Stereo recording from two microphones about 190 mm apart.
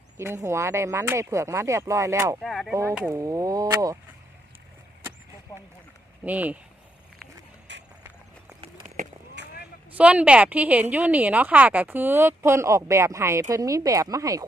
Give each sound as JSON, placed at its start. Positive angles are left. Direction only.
{"t": 0.4, "sound": "a woman's voice", "side_deg": -15}
{"t": 2.4, "sound": "speech", "side_deg": 0}
{"t": 3.1, "sound": "a woman's voice", "side_deg": -15}
{"t": 6.2, "sound": "a woman's voice", "side_deg": -10}
{"t": 7.7, "sound": "a sound", "side_deg": -70}
{"t": 9.4, "sound": "vehicle", "side_deg": -65}
{"t": 9.9, "sound": "a woman's voice", "side_deg": -5}